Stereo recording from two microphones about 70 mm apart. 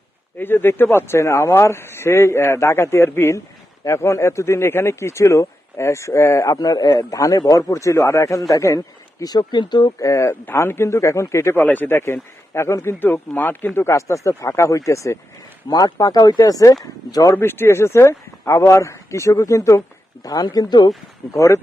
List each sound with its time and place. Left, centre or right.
0.3 s speech: left
6.9 s speech: left
7.7 s speech: left
9.2 s speech: left
10.0 s speech: left
10.4 s speech: left
11.5 s speech: left
13.7 s speech: left
15.7 s speech: left
16.4 s speech: left
17.3 s speech: left
20.2 s speech: left
21.3 s speech: left